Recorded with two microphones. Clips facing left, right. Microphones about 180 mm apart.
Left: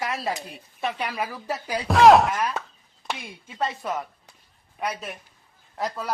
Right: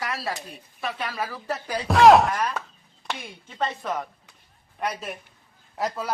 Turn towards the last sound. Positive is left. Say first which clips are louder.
# right 1 dB
turn(degrees=0)  # may be behind; listen again after turning